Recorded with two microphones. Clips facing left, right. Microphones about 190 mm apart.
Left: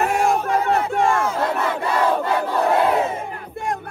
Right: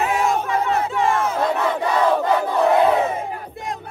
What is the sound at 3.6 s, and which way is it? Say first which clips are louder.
Battle cry: left 7 dB; 55° left (ahead or behind).